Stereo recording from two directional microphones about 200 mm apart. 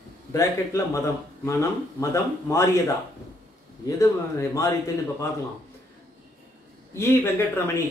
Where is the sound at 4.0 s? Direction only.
15° left (ahead or behind).